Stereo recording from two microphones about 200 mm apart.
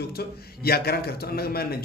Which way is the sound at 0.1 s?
50° left (ahead or behind).